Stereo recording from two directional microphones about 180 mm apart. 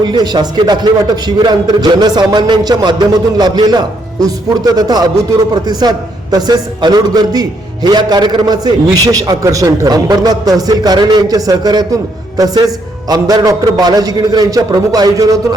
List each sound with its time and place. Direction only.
0.0 s a man's voice: 25° right (ahead or behind)
6.3 s a man's voice: 20° right (ahead or behind)